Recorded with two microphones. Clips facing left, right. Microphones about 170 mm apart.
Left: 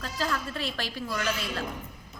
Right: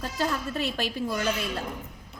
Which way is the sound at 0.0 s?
20° right (ahead or behind).